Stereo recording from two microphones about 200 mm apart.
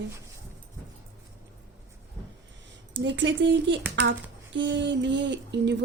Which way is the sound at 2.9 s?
65° right (ahead or behind).